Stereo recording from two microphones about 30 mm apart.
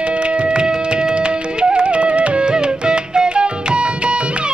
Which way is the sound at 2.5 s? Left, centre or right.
Right.